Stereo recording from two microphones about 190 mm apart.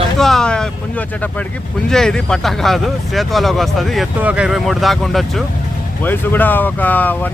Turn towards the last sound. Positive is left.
turn(degrees=10)  # may be behind; listen again after turning